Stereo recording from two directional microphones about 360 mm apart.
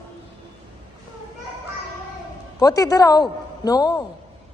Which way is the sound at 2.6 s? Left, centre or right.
Centre.